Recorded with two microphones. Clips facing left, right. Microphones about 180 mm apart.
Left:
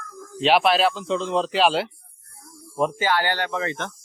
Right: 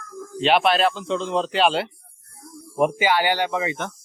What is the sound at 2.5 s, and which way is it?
Speech, 20° right (ahead or behind).